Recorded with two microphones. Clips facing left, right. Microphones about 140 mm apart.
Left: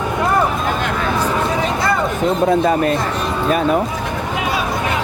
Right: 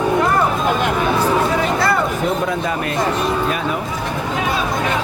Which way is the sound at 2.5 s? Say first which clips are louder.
Left 7 dB; 40° left (ahead or behind).